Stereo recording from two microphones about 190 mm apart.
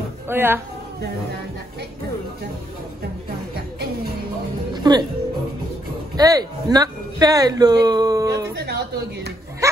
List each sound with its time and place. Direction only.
0.3 s speech: 10° right (ahead or behind)
4.9 s speech: 20° right (ahead or behind)
6.1 s speech: 20° right (ahead or behind)
8.5 s a man's voice: 60° right (ahead or behind)
9.6 s dog: 15° right (ahead or behind)